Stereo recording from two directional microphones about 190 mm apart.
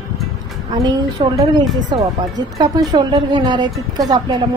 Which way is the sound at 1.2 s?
25° right (ahead or behind).